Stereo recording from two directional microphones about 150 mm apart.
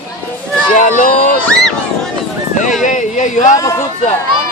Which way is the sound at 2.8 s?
55° left (ahead or behind).